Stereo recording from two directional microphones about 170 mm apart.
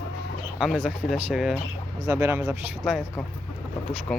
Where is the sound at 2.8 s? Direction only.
5° left (ahead or behind).